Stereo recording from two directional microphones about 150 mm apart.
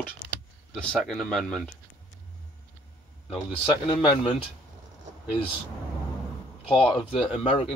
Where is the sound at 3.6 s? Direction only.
30° left (ahead or behind).